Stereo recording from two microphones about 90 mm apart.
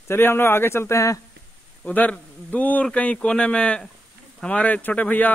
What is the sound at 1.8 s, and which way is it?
Speech, 15° left (ahead or behind).